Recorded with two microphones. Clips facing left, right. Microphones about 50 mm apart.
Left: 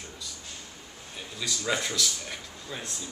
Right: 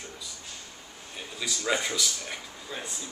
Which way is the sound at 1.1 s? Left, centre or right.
Centre.